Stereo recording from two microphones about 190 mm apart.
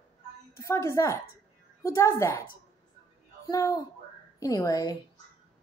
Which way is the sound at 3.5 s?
15° left (ahead or behind).